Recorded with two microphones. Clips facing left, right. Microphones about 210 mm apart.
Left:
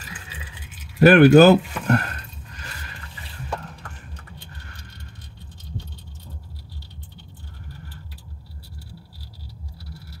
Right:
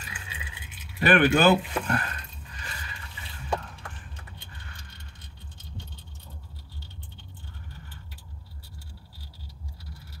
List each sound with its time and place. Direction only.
0.9 s speech: 40° left (ahead or behind)